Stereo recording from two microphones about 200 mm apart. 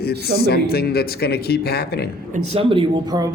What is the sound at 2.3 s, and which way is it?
Speech, 30° right (ahead or behind).